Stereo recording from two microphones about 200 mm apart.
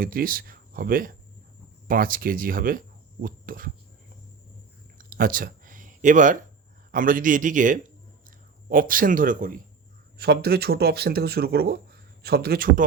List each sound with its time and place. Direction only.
0.0 s speech: 45° right (ahead or behind)
4.9 s a sound: 45° right (ahead or behind)
6.9 s speech: 45° right (ahead or behind)